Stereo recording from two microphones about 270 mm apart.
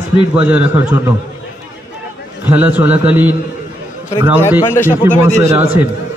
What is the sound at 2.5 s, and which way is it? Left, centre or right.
A man's voice, centre.